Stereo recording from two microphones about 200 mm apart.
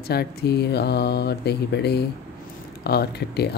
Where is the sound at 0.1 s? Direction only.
55° left (ahead or behind).